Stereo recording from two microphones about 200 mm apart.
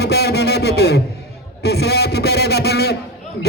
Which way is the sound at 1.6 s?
55° left (ahead or behind).